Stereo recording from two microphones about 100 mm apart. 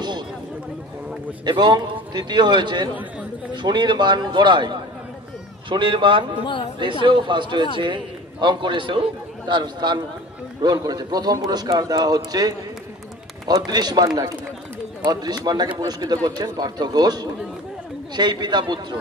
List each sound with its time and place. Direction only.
1.4 s a man's voice: 50° right (ahead or behind)
6.4 s speech: 55° left (ahead or behind)
6.8 s a man's voice: 55° right (ahead or behind)